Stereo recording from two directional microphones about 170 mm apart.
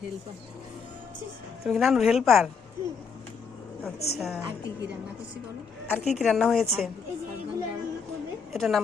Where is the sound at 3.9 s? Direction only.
70° left (ahead or behind).